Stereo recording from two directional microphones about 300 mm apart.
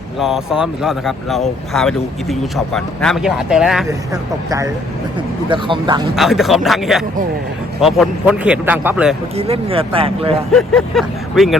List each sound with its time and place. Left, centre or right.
0.2 s speech: centre
6.1 s speech: centre
9.3 s speech: centre
10.5 s speech: centre